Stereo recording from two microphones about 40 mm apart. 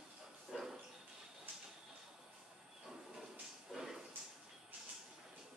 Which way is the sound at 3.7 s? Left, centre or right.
Centre.